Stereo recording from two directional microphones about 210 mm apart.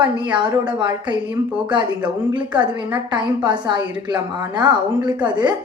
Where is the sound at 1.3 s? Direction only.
5° right (ahead or behind).